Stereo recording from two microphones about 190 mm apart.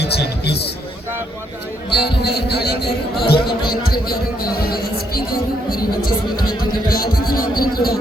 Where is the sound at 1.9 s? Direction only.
60° left (ahead or behind).